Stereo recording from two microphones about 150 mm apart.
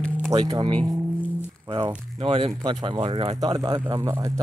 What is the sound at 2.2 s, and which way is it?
Speech, 40° right (ahead or behind).